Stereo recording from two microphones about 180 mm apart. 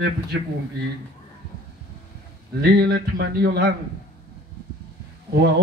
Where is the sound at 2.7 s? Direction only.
65° right (ahead or behind).